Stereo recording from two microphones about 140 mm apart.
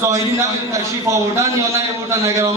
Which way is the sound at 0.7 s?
20° right (ahead or behind).